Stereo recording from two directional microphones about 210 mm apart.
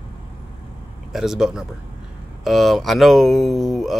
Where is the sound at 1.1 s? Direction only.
Centre (ahead or behind).